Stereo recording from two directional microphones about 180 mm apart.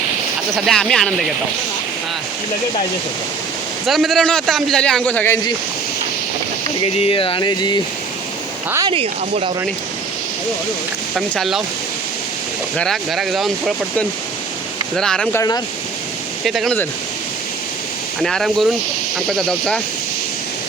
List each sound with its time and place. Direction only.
0.5 s a man's voice: 5° left (ahead or behind)
3.8 s a man's voice: centre (ahead or behind)
6.7 s speech: 35° left (ahead or behind)
8.9 s speech: 30° right (ahead or behind)
11.3 s a man's voice: centre (ahead or behind)
12.7 s a man's voice: centre (ahead or behind)
14.9 s a man's voice: 5° left (ahead or behind)
15.4 s speech: 20° left (ahead or behind)
16.5 s a man's voice: centre (ahead or behind)
18.2 s a man's voice: centre (ahead or behind)